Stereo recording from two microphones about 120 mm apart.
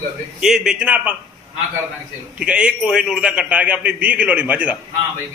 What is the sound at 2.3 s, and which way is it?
A man's voice, 10° right (ahead or behind).